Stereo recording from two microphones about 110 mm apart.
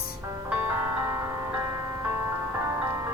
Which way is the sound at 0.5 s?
20° right (ahead or behind).